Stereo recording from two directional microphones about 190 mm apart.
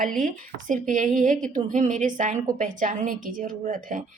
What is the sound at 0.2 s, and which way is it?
A woman's voice, 45° right (ahead or behind).